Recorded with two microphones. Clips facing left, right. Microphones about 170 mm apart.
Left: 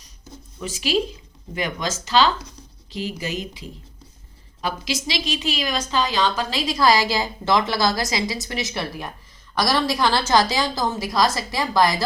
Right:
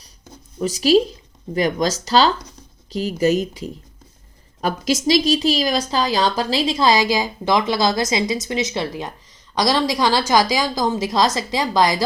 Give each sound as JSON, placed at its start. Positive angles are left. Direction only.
{"t": 0.6, "sound": "a woman's voice", "side_deg": -40}